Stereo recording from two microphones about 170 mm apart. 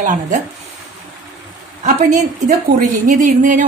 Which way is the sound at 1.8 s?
45° right (ahead or behind).